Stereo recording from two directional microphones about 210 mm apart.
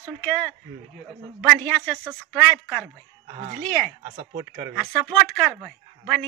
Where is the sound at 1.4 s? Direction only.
Centre (ahead or behind).